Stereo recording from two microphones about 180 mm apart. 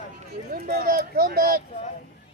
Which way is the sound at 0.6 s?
55° right (ahead or behind).